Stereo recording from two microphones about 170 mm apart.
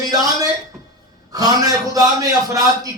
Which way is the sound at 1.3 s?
20° right (ahead or behind).